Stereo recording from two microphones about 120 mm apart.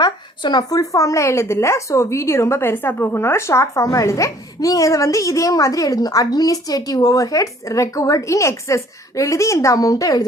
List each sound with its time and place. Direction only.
0.0 s speech: 35° left (ahead or behind)